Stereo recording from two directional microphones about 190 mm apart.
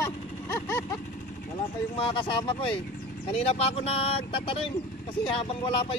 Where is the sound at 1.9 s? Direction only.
25° left (ahead or behind).